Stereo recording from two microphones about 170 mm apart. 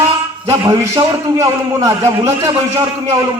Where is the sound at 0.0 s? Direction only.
15° right (ahead or behind).